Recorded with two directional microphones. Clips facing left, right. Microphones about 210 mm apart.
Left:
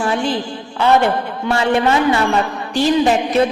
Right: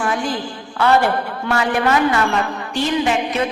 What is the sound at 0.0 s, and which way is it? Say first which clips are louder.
A man's voice: left 3 dB; 30° left (ahead or behind).